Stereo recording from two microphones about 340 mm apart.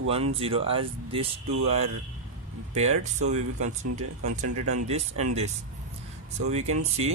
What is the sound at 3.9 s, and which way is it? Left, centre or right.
Speech, right.